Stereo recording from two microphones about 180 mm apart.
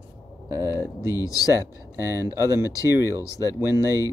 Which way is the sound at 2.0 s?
15° right (ahead or behind).